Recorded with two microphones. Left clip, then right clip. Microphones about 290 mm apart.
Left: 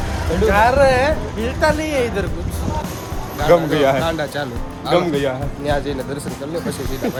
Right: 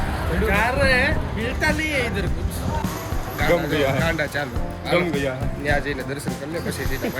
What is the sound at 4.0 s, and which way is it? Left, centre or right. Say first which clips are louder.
Speech: left 2 dB; centre.